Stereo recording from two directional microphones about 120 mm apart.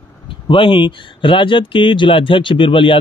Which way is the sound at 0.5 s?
45° left (ahead or behind).